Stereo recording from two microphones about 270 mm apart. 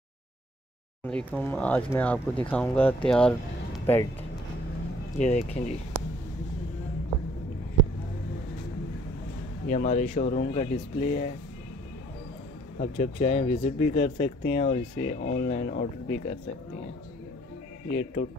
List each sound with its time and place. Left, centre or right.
1.0 s speech: centre
5.1 s speech: left
9.7 s speech: left
12.7 s speech: left